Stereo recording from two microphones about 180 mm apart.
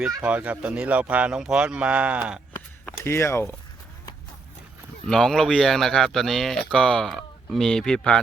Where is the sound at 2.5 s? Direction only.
10° left (ahead or behind).